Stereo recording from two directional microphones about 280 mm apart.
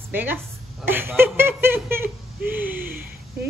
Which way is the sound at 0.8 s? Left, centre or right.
Centre.